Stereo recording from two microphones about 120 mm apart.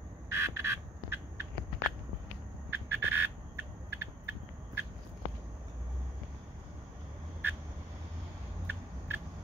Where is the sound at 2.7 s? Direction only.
20° right (ahead or behind).